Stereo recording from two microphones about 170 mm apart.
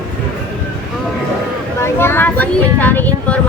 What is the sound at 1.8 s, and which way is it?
Speech, 15° left (ahead or behind).